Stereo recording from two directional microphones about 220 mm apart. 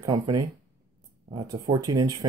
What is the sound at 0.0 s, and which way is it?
Speech, 20° right (ahead or behind).